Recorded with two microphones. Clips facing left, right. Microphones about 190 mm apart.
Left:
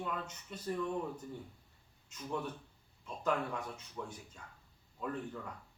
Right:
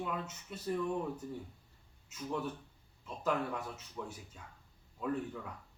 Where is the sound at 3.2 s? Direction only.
5° right (ahead or behind).